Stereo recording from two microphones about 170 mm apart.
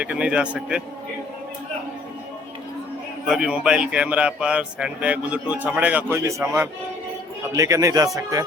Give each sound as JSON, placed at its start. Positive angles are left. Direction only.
{"t": 0.0, "sound": "a man's voice", "side_deg": -5}
{"t": 3.2, "sound": "a man's voice", "side_deg": -5}